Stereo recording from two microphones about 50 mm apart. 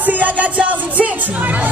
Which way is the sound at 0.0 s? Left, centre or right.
Right.